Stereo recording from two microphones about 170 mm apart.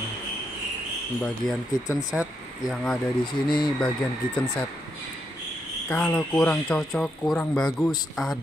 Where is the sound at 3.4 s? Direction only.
25° left (ahead or behind).